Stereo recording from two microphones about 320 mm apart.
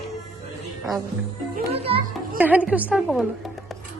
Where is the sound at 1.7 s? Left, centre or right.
Centre.